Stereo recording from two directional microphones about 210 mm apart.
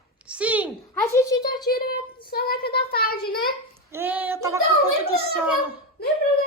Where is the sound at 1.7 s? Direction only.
45° left (ahead or behind).